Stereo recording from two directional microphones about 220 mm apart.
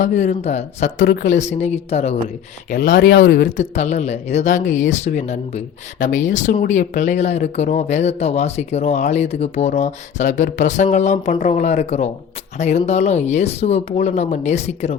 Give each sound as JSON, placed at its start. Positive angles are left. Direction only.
{"t": 0.0, "sound": "speech", "side_deg": 35}
{"t": 3.6, "sound": "speech", "side_deg": 30}